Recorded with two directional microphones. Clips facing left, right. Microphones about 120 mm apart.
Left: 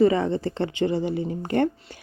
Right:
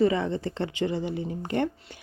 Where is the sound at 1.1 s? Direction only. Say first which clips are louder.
Left 4 dB; 50° left (ahead or behind).